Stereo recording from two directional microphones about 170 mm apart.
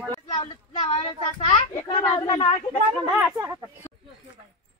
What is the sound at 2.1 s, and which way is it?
Speech, 30° left (ahead or behind).